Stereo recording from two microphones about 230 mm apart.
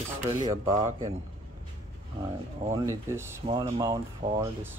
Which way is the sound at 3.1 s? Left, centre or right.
Centre.